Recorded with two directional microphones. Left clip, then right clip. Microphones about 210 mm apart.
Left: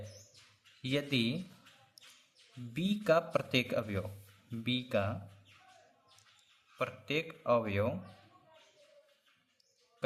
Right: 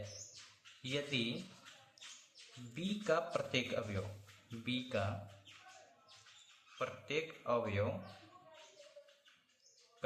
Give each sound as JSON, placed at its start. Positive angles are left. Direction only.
{"t": 0.8, "sound": "speech", "side_deg": 45}
{"t": 2.7, "sound": "speech", "side_deg": 40}
{"t": 6.7, "sound": "speech", "side_deg": 45}